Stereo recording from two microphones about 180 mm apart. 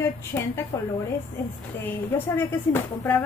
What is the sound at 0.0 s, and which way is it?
Speech, 15° left (ahead or behind).